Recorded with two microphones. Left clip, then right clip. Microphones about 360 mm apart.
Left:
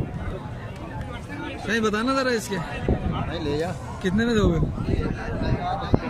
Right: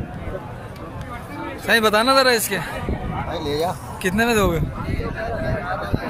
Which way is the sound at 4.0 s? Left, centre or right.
Centre.